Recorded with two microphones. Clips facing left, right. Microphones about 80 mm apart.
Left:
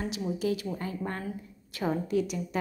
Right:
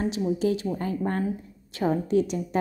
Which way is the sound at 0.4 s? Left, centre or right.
Right.